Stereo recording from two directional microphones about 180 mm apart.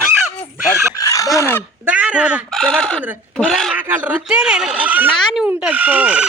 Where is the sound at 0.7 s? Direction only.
15° left (ahead or behind).